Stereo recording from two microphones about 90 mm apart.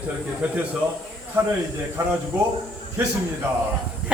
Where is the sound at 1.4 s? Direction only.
30° right (ahead or behind).